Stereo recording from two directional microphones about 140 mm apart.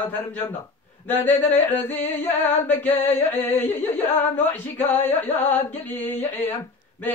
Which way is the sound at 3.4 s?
15° left (ahead or behind).